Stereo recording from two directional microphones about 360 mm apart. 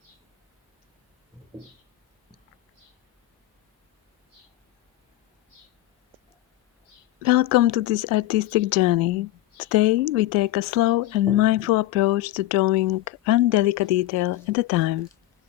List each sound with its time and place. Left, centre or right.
7.2 s speech: right